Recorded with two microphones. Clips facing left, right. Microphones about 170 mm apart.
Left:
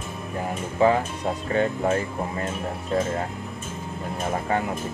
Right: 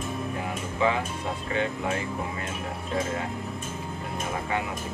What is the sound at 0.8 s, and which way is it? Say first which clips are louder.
Speech: left 6 dB; 40° left (ahead or behind).